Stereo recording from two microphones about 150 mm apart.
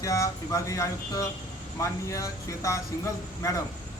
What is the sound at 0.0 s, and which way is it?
Speech, 20° left (ahead or behind).